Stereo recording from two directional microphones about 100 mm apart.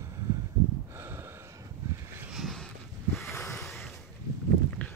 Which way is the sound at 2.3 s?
Centre (ahead or behind).